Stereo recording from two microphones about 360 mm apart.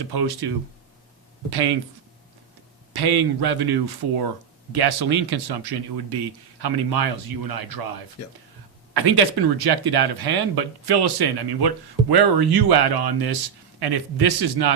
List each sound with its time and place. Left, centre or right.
0.0 s speech: right
1.5 s speech: right
2.9 s a man's voice: right
8.9 s speech: right